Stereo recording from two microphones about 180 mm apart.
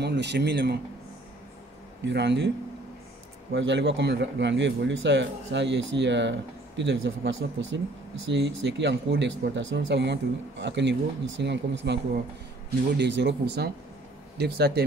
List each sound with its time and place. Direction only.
0.0 s speech: 70° right (ahead or behind)
2.0 s speech: 75° right (ahead or behind)
3.5 s speech: 80° right